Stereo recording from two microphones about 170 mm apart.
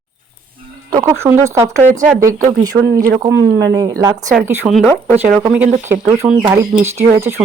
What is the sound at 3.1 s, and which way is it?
Speech, 15° right (ahead or behind).